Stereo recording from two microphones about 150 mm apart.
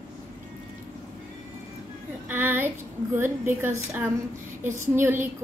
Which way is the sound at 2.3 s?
15° right (ahead or behind).